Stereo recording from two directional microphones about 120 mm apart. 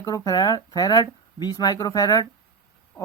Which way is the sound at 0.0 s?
30° left (ahead or behind).